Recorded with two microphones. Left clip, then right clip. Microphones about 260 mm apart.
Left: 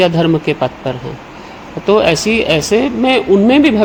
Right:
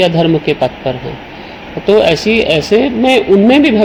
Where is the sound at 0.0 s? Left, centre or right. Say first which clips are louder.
Right 1 dB; left.